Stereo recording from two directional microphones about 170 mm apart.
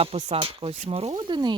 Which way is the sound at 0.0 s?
35° right (ahead or behind).